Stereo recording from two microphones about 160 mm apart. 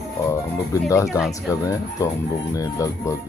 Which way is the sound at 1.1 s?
5° right (ahead or behind).